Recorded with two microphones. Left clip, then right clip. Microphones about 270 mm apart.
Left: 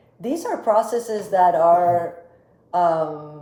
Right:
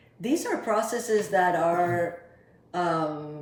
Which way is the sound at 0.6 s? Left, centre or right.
Centre.